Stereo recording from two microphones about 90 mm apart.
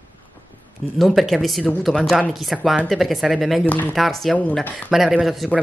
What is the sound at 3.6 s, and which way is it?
Speech, 20° left (ahead or behind).